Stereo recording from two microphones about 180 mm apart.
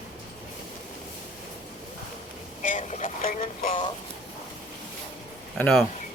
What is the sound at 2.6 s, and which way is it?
Vehicle, 45° left (ahead or behind).